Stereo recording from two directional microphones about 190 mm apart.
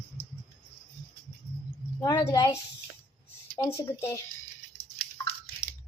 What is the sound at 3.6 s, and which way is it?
Speech, 15° left (ahead or behind).